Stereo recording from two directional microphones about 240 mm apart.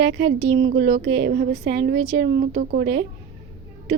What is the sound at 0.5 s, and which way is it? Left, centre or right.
Speech, right.